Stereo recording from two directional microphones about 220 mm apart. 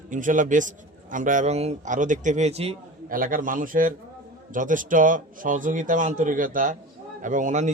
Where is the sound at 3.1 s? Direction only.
40° right (ahead or behind).